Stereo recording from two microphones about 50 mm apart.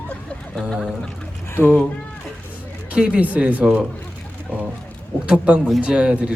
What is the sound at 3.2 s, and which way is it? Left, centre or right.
Speech, right.